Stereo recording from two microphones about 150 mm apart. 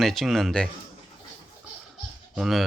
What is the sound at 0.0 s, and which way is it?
Speech, centre (ahead or behind).